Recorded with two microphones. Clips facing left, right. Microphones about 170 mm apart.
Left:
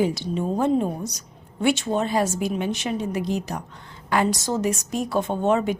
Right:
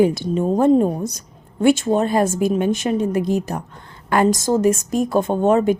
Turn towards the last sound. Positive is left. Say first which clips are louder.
# right 6 dB
turn(degrees=-50)  # may be behind; listen again after turning